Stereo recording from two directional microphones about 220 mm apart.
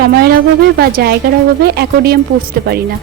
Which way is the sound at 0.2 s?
45° right (ahead or behind).